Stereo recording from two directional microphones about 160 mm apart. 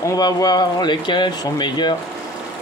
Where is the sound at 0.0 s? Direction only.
20° left (ahead or behind).